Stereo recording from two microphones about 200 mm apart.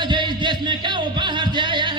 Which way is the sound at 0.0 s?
20° right (ahead or behind).